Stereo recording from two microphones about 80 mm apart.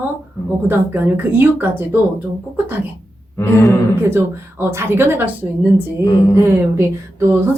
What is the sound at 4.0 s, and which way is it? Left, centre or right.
Speech, right.